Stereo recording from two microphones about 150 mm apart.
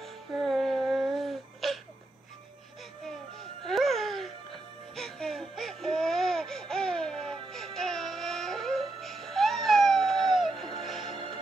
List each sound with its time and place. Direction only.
0.0 s music: centre (ahead or behind)
3.3 s music: centre (ahead or behind)